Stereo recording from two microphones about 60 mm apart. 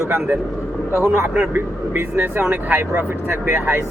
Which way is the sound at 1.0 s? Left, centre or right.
Right.